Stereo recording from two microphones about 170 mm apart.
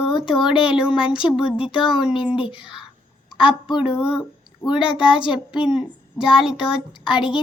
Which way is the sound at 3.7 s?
30° left (ahead or behind).